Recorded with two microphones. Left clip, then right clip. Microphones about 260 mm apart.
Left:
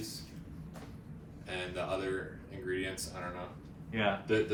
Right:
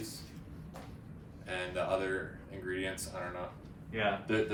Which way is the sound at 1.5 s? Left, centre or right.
Centre.